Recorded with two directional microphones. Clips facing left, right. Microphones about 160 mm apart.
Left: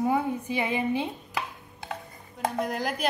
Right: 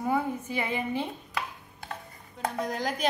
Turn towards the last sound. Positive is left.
turn(degrees=10)  # may be behind; listen again after turning